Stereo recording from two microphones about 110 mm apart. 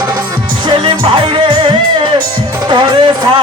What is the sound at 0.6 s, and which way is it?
Music, 50° right (ahead or behind).